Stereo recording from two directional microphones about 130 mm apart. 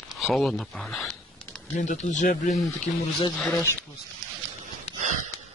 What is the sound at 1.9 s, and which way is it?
Speech, 70° left (ahead or behind).